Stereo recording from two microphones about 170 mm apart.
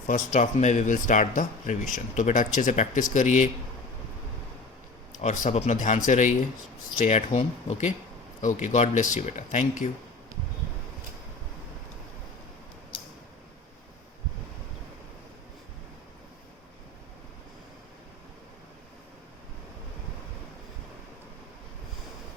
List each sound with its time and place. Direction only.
0.1 s speech: 45° left (ahead or behind)
5.2 s speech: 45° left (ahead or behind)